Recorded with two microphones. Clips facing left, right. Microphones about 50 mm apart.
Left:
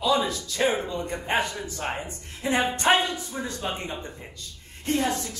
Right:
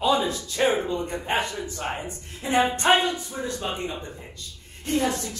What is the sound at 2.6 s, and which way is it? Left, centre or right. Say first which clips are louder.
Speech: right 1 dB; right.